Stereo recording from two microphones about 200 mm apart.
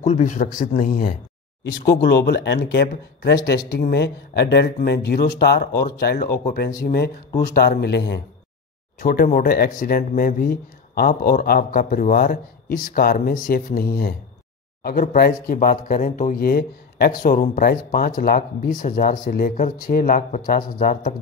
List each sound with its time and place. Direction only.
0.0 s a man's voice: 35° left (ahead or behind)
1.6 s speech: 55° left (ahead or behind)
9.0 s speech: 45° left (ahead or behind)